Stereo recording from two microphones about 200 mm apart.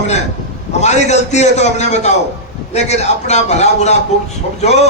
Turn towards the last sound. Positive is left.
turn(degrees=35)  # may be behind; listen again after turning